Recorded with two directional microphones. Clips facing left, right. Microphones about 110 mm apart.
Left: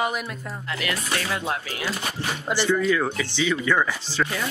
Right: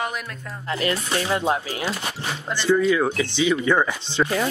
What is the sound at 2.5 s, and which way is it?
Speech, 5° left (ahead or behind).